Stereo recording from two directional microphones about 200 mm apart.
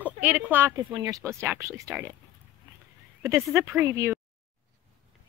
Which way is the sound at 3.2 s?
10° right (ahead or behind).